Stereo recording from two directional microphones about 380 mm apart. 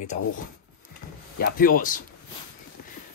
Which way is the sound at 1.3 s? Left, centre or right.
Left.